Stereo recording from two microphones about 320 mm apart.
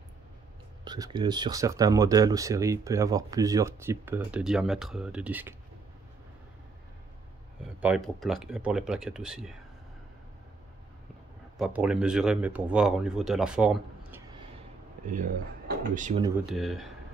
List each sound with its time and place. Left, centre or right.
0.8 s speech: centre
7.8 s speech: centre
11.5 s speech: centre
15.0 s speech: right
16.2 s speech: centre
16.5 s speech: centre